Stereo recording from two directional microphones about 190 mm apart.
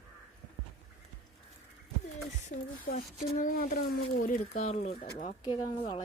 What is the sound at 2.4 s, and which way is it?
Speech, 50° left (ahead or behind).